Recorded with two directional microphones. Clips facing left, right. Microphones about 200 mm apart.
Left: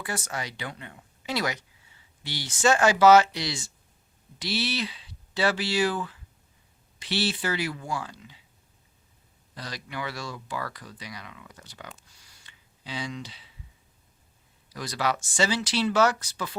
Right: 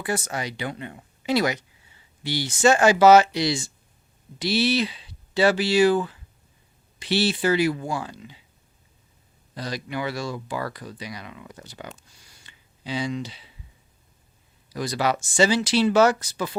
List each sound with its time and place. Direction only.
0.0 s speech: 15° right (ahead or behind)
7.7 s speech: 35° right (ahead or behind)
9.6 s speech: 15° right (ahead or behind)
12.5 s a sound: 15° right (ahead or behind)
14.8 s speech: 15° right (ahead or behind)